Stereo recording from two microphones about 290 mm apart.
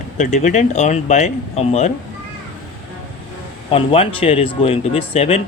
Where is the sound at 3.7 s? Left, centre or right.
Centre.